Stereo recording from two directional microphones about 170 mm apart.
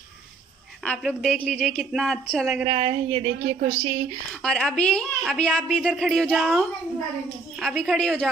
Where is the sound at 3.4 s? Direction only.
70° right (ahead or behind).